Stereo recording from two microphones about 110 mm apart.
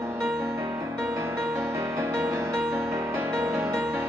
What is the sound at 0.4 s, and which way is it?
Music, 25° right (ahead or behind).